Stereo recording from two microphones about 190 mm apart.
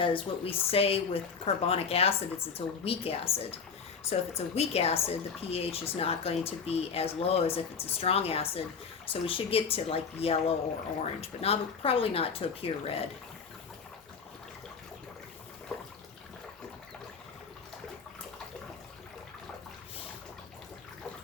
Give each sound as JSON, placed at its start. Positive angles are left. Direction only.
{"t": 0.0, "sound": "speech", "side_deg": 30}